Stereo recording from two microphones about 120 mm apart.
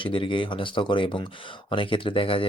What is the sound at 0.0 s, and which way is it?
Speech, 45° left (ahead or behind).